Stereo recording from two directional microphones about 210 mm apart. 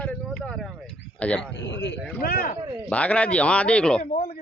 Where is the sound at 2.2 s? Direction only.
45° left (ahead or behind).